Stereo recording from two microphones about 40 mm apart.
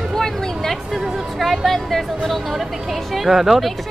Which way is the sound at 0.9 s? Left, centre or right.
Centre.